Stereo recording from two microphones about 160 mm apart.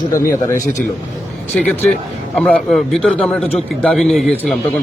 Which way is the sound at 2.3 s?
5° left (ahead or behind).